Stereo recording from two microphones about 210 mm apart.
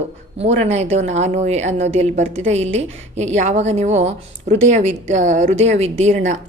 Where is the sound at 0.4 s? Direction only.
30° right (ahead or behind).